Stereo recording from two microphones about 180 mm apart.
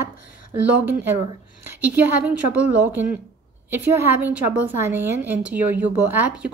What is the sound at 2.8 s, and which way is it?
Speech, 10° right (ahead or behind).